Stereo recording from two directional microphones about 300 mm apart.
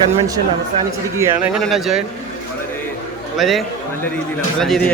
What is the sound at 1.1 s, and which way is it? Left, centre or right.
Speech, centre.